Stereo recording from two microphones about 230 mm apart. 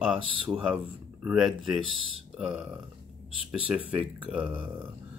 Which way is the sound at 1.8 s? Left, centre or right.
Left.